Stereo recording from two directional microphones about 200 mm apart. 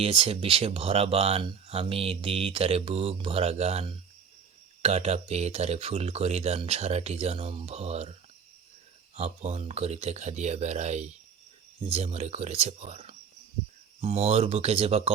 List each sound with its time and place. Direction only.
0.0 s speech: 30° right (ahead or behind)
9.1 s speech: 30° right (ahead or behind)